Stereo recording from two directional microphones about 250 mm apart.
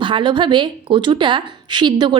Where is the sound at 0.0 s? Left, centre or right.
Centre.